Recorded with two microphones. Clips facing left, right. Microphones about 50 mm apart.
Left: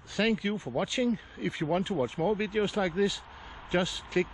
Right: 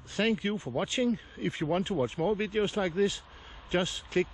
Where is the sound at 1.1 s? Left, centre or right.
Left.